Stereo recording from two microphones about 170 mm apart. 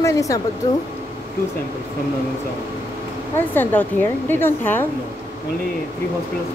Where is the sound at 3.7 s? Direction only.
10° left (ahead or behind).